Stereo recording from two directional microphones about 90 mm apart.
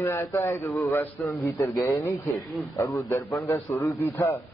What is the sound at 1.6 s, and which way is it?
Speech, centre (ahead or behind).